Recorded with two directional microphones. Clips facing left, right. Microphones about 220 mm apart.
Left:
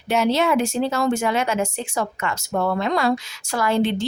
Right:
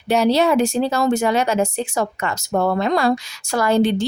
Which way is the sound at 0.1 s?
35° right (ahead or behind).